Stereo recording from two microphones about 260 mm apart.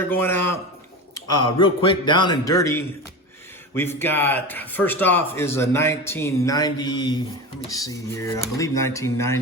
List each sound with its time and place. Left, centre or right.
0.1 s speech: centre